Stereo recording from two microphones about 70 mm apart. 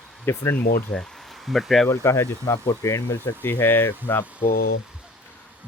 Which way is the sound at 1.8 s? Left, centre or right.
Left.